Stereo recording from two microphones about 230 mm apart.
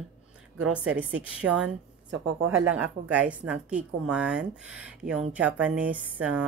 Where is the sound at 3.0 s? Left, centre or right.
Centre.